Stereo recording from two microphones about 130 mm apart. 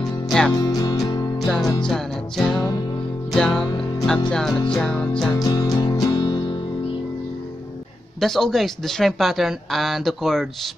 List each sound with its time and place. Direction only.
0.6 s music: 30° left (ahead or behind)
1.4 s music: 5° left (ahead or behind)
1.9 s speech: centre (ahead or behind)
3.3 s music: 5° left (ahead or behind)
4.3 s speech: 5° left (ahead or behind)
5.3 s music: 30° left (ahead or behind)
8.2 s speech: centre (ahead or behind)